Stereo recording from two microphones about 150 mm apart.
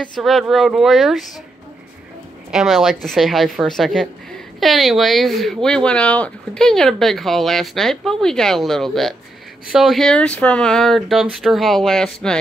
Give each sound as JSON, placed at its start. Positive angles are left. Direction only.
{"t": 0.0, "sound": "speech", "side_deg": 0}
{"t": 2.5, "sound": "speech", "side_deg": 0}